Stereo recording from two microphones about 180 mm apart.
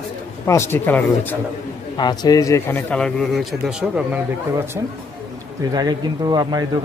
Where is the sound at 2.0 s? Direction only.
20° left (ahead or behind); by 4.6 s 5° right (ahead or behind).